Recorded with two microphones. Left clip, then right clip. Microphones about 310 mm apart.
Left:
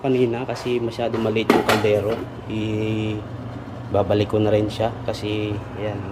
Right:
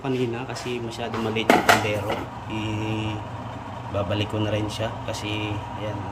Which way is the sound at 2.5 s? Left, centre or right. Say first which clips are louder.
Left 4 dB; centre.